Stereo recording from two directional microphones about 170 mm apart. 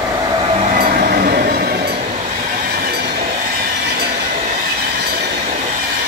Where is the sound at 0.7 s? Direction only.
60° right (ahead or behind).